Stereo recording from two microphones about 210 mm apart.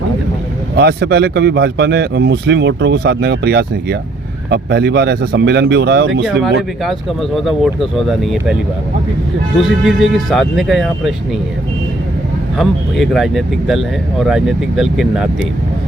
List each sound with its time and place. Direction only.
0.8 s speech: 50° right (ahead or behind)
6.2 s speech: centre (ahead or behind)
9.6 s speech: centre (ahead or behind)
12.5 s speech: centre (ahead or behind)